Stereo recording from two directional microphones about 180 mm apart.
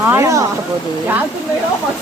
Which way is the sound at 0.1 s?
15° right (ahead or behind).